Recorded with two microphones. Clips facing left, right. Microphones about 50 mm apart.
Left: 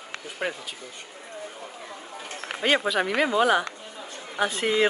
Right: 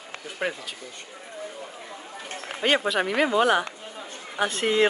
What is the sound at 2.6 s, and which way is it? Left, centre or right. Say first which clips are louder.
Speech: even; centre.